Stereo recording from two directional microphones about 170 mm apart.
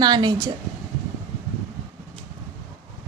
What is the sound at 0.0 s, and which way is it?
Speech, 25° right (ahead or behind).